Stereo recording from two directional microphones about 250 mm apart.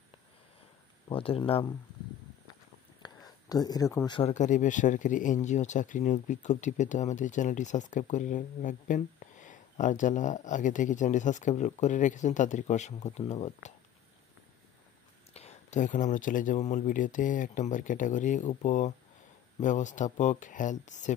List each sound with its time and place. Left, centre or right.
1.0 s speech: left
3.4 s speech: centre
4.3 s speech: left
15.3 s speech: left